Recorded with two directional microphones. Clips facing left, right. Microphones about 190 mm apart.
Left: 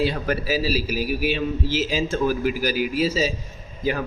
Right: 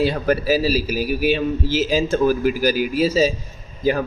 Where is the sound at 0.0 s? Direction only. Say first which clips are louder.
Right 4 dB; 45° right (ahead or behind).